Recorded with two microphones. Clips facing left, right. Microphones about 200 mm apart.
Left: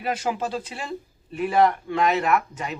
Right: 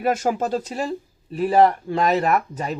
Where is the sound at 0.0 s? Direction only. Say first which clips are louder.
Right 5 dB; 45° right (ahead or behind).